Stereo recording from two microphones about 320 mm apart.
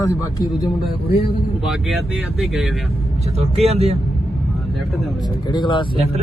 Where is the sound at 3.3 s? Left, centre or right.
Centre.